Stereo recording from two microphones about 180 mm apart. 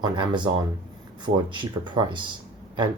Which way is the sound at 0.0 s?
25° right (ahead or behind).